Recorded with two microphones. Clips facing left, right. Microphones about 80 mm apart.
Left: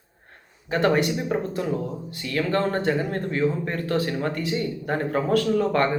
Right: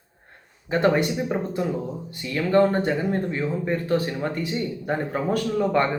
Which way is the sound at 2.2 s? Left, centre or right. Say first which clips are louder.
Right 4 dB; centre.